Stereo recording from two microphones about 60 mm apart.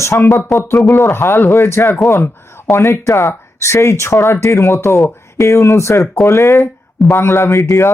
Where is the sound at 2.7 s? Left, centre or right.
Left.